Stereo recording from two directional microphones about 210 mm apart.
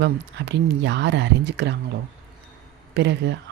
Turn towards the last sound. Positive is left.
turn(degrees=-55)  # may be behind; listen again after turning